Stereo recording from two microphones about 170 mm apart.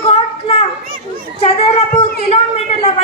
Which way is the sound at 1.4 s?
35° left (ahead or behind).